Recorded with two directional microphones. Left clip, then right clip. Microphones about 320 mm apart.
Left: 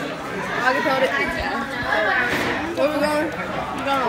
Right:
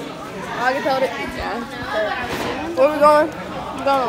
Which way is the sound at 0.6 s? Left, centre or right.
Centre.